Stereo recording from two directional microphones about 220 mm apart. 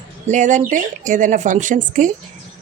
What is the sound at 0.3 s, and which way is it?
A woman's voice, 35° right (ahead or behind).